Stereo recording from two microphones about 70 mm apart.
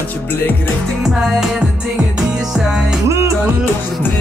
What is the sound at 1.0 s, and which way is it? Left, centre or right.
Speech, centre.